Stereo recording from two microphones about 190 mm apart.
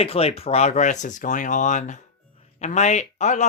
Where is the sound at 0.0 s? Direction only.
30° left (ahead or behind).